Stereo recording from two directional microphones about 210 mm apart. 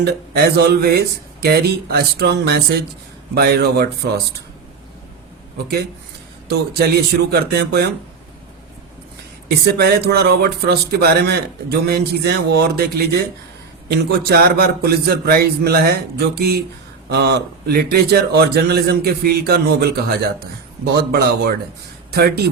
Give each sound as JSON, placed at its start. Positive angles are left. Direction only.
{"t": 0.0, "sound": "a man's voice", "side_deg": -50}
{"t": 6.5, "sound": "a man's voice", "side_deg": -50}
{"t": 9.6, "sound": "a man's voice", "side_deg": -50}